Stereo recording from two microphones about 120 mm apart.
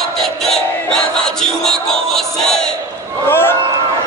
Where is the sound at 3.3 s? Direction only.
20° left (ahead or behind).